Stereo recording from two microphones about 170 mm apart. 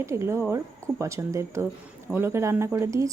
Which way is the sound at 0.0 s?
15° right (ahead or behind).